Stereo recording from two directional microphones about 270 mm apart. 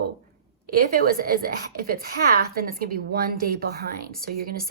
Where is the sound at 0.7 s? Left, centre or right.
Right.